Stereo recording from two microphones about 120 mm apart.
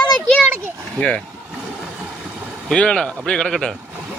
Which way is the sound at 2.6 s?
10° left (ahead or behind).